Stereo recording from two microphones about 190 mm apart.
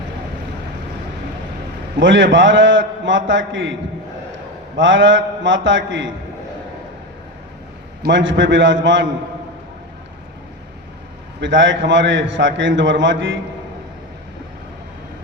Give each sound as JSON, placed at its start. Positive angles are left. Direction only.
{"t": 2.0, "sound": "a man's voice", "side_deg": -75}
{"t": 4.8, "sound": "a man's voice", "side_deg": -75}
{"t": 8.0, "sound": "a man's voice", "side_deg": -75}
{"t": 11.3, "sound": "a man's voice", "side_deg": -75}